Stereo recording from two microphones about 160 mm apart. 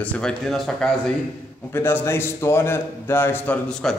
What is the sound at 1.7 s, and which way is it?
Speech, 15° left (ahead or behind).